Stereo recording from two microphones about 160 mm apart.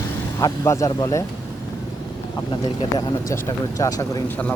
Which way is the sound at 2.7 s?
25° left (ahead or behind).